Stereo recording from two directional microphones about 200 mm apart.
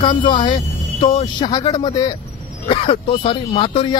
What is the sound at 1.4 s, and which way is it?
A man's voice, 20° left (ahead or behind).